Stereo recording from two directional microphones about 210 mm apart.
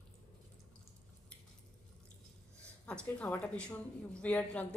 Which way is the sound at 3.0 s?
5° left (ahead or behind).